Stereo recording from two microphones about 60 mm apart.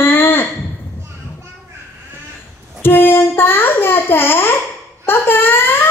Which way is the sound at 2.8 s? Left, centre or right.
Left.